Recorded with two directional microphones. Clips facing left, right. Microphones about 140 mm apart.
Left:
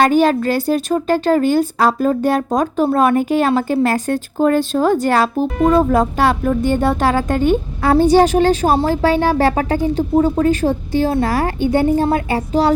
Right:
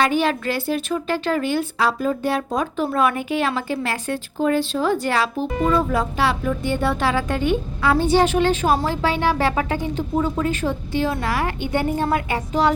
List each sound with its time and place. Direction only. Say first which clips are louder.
0.0 s a woman's voice: left 7 dB; 40° left (ahead or behind)